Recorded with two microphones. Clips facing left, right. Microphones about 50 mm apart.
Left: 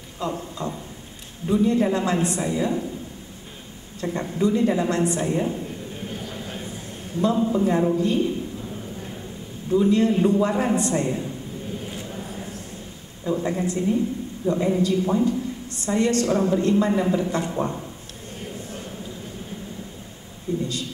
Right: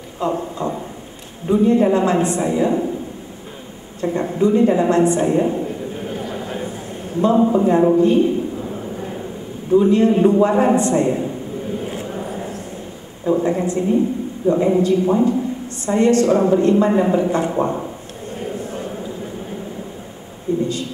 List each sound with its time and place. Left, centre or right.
0.2 s a woman's voice: right
4.0 s a woman's voice: right
6.1 s a sound: right
7.2 s a man's voice: right
9.7 s a man's voice: right
11.9 s a sound: right
13.2 s a woman's voice: right
20.5 s a woman's voice: right